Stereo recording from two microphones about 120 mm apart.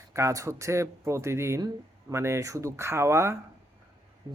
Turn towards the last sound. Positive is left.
turn(degrees=-25)  # may be behind; listen again after turning